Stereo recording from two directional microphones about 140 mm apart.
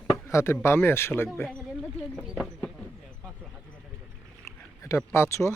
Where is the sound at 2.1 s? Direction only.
Centre (ahead or behind).